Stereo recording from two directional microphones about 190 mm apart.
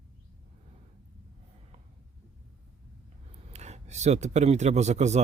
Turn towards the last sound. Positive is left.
turn(degrees=-35)  # may be behind; listen again after turning